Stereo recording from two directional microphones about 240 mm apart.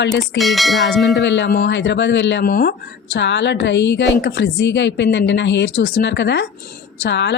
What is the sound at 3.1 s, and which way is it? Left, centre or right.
Speech, left.